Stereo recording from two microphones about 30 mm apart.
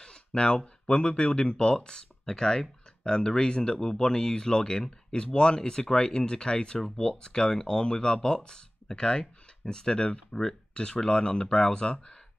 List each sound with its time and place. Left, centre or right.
0.3 s speech: left